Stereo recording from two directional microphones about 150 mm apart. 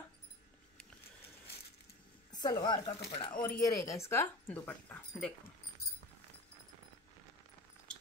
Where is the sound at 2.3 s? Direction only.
25° left (ahead or behind); by 5.3 s 10° left (ahead or behind).